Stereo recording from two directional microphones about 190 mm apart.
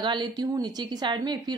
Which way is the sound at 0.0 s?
25° right (ahead or behind).